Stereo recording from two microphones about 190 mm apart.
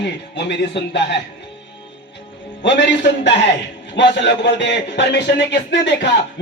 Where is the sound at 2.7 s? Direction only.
65° left (ahead or behind).